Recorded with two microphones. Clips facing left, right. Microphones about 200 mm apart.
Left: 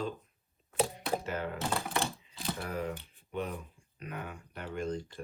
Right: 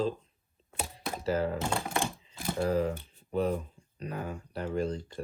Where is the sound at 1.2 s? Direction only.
35° right (ahead or behind).